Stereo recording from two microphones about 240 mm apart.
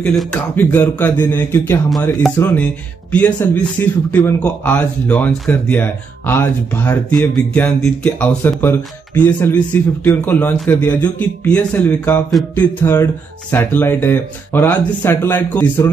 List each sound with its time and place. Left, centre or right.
0.0 s speech: centre